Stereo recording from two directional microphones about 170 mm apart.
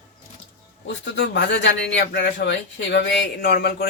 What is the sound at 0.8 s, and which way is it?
Speech, 90° left.